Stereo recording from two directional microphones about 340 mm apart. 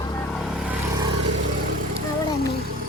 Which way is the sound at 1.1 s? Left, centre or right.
Right.